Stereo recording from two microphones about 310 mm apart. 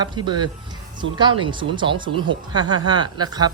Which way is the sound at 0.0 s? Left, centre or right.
Centre.